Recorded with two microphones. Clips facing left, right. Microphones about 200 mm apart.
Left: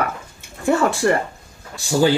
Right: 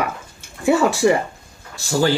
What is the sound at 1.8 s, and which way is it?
Speech, 15° left (ahead or behind).